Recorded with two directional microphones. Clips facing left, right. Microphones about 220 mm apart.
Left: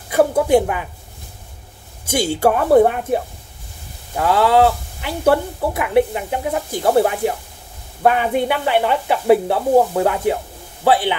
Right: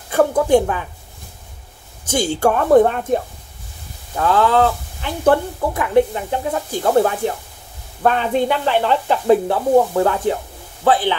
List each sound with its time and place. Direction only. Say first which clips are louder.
0.1 s speech: even; 10° left (ahead or behind)
2.0 s speech: even; 10° left (ahead or behind)
4.2 s speech: left 1 dB; 10° left (ahead or behind)